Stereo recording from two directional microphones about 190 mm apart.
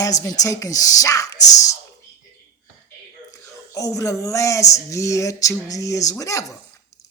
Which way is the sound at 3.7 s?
15° left (ahead or behind).